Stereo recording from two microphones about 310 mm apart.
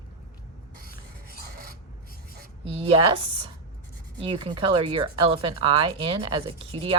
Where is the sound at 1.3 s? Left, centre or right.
Right.